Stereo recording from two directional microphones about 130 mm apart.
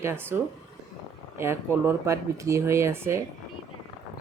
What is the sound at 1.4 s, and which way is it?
Speech, 20° right (ahead or behind).